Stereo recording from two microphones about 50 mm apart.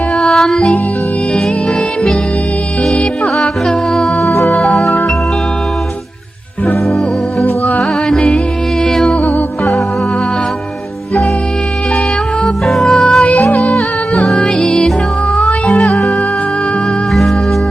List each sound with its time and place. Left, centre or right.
0.2 s music: centre
3.3 s music: centre
6.8 s music: centre
8.8 s music: centre
9.2 s music: left
12.6 s music: centre
14.3 s music: left
14.7 s music: centre